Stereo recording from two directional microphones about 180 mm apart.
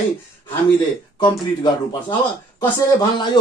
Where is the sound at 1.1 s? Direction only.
25° left (ahead or behind).